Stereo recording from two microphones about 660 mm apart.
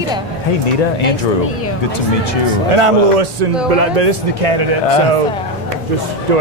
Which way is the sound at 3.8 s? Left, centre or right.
Right.